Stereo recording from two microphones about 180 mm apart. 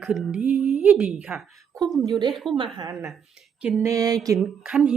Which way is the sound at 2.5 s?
25° right (ahead or behind).